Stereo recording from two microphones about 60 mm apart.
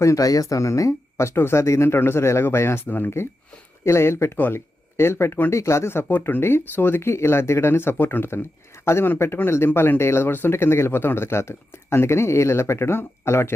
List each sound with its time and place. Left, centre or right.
0.0 s speech: left
0.3 s speech: left
3.8 s speech: left
5.5 s speech: left